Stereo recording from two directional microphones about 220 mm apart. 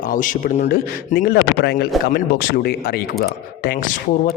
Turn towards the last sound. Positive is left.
turn(degrees=35)  # may be behind; listen again after turning